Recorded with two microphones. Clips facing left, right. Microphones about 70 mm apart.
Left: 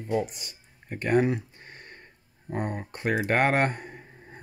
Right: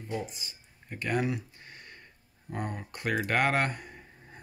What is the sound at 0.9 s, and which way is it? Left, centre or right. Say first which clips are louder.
Speech: left 7 dB; left.